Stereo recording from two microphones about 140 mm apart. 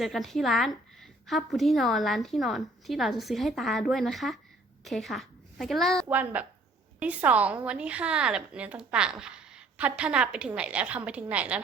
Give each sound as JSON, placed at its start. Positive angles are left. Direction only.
{"t": 0.0, "sound": "a woman's voice", "side_deg": 0}
{"t": 6.1, "sound": "a woman's voice", "side_deg": -10}